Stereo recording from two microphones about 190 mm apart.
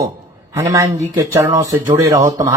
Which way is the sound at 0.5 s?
15° right (ahead or behind).